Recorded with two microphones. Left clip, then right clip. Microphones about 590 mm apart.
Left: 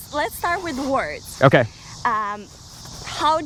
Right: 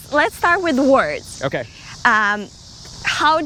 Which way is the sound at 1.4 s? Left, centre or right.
Left.